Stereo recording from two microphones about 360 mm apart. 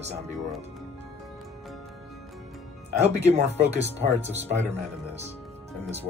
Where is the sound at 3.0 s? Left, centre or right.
Centre.